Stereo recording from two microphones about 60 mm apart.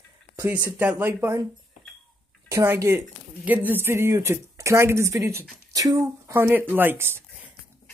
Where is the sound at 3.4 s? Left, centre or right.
Right.